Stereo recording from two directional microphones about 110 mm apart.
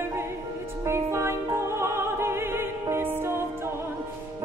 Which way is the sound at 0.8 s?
25° right (ahead or behind).